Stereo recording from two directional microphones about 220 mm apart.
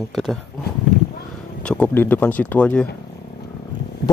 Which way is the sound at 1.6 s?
5° left (ahead or behind).